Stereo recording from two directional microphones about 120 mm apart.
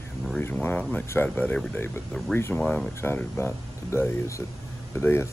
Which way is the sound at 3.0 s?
20° left (ahead or behind).